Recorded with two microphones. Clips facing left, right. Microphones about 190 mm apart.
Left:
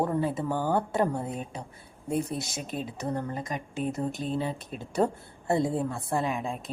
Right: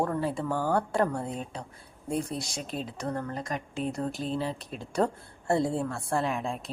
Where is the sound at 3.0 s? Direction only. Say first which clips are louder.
Left 1 dB; 20° left (ahead or behind).